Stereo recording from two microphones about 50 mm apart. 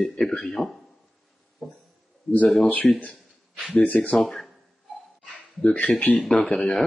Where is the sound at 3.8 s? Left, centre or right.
Left.